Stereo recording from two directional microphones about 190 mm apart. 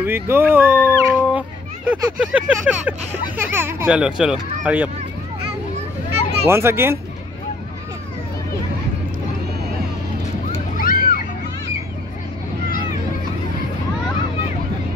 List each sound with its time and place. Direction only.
0.0 s speech: 10° right (ahead or behind)
6.4 s speech: 15° right (ahead or behind)
10.8 s a sound: 50° left (ahead or behind)